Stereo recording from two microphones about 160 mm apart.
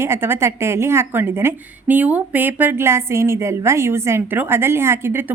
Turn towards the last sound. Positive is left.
turn(degrees=-15)  # may be behind; listen again after turning